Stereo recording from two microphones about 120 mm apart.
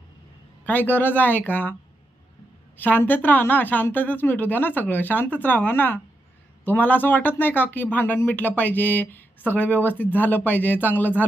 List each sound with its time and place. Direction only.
0.7 s a woman's voice: 15° left (ahead or behind)
2.8 s a woman's voice: 15° left (ahead or behind)